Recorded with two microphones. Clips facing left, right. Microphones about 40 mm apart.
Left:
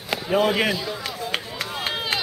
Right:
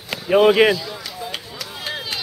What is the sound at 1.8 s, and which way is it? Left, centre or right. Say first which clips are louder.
Chop: left 2 dB; left.